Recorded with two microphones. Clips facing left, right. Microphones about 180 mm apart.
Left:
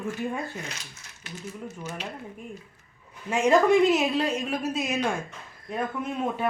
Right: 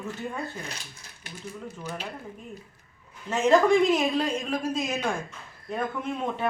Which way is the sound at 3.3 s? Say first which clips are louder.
Even; 10° left (ahead or behind).